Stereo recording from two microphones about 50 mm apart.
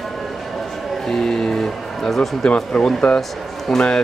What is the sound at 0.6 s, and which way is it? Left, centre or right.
Music, centre.